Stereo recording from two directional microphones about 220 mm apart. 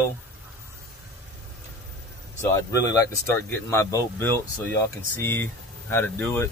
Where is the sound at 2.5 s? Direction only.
15° left (ahead or behind).